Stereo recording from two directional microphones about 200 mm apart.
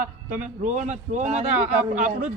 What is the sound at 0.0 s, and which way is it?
A man's voice, 40° right (ahead or behind).